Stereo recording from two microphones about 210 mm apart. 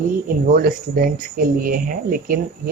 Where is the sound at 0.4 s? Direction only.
45° right (ahead or behind).